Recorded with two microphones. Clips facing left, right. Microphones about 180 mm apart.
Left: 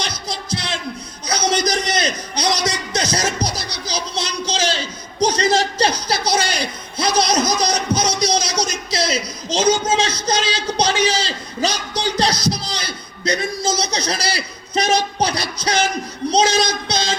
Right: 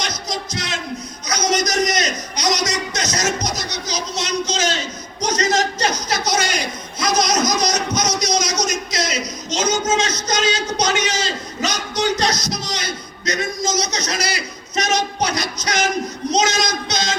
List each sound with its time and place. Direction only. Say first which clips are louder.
0.0 s music: right 1 dB; 30° left (ahead or behind)
1.3 s a sound: left 1 dB; 30° left (ahead or behind)
16.3 s child singing: left 3 dB; 30° left (ahead or behind)